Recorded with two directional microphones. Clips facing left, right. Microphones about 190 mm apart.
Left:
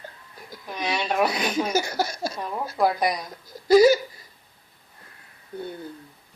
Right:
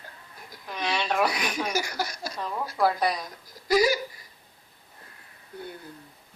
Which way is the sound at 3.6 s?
25° left (ahead or behind).